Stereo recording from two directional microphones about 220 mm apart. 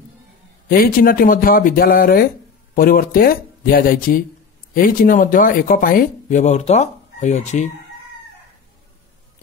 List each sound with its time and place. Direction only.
0.7 s speech: 40° left (ahead or behind)